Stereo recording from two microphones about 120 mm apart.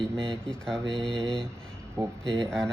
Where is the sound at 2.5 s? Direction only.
5° left (ahead or behind).